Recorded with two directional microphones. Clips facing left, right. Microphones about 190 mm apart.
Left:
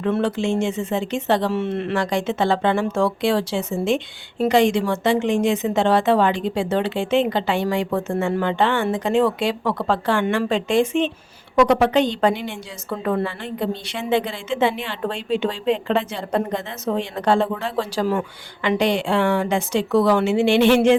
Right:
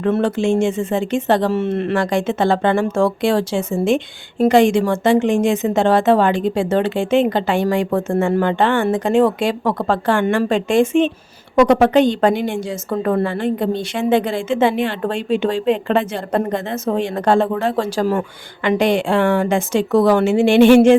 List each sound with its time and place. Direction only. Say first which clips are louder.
0.0 s speech: right 4 dB; 45° right (ahead or behind)